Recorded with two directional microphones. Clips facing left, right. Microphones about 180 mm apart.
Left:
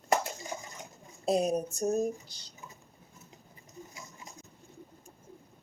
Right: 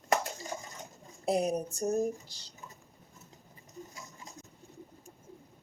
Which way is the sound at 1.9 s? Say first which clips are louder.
Even; 20° left (ahead or behind).